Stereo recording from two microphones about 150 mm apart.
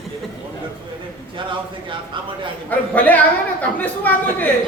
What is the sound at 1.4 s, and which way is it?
Speech, 35° right (ahead or behind).